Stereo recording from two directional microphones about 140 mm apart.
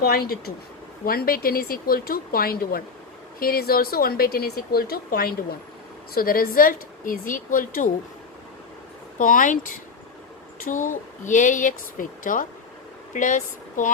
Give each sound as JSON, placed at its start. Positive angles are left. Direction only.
{"t": 0.0, "sound": "speech", "side_deg": 90}
{"t": 9.1, "sound": "a woman's voice", "side_deg": 70}